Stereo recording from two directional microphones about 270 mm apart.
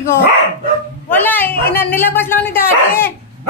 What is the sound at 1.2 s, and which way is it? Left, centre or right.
A woman's voice, centre.